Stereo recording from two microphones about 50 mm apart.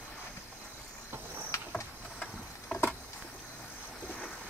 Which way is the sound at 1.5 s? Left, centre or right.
Left.